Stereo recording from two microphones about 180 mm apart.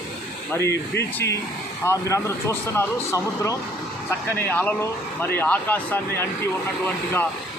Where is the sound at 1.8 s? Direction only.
15° left (ahead or behind).